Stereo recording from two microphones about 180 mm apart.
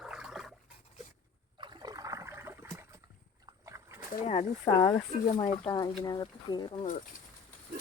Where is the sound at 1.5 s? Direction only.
25° right (ahead or behind).